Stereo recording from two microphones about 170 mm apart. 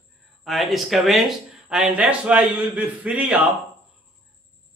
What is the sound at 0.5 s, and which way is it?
A man's voice, centre (ahead or behind).